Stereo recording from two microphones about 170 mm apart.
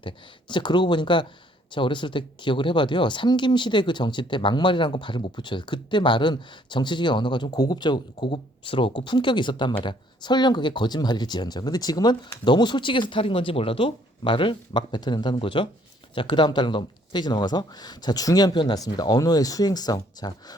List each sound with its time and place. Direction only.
0.0 s speech: 25° left (ahead or behind)